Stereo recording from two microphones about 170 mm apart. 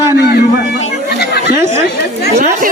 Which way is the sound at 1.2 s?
70° left (ahead or behind).